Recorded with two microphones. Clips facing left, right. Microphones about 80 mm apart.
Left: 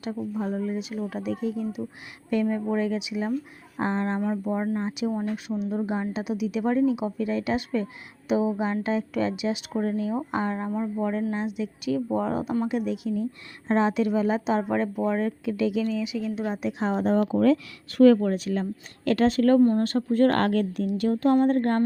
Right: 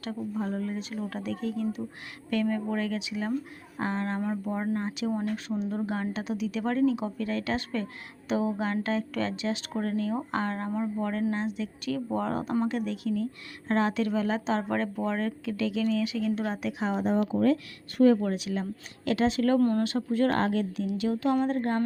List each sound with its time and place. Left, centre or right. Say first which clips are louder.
0.0 s speech: left 3 dB; centre
3.8 s speech: left 4 dB; left
5.5 s speech: left 2 dB; centre
5.8 s speech: left 3 dB; centre
16.8 s speech: left 4 dB; left
17.8 s speech: left 5 dB; left
18.2 s speech: left 4 dB; left
19.5 s speech: left 5 dB; left
19.8 s speech: left 5 dB; left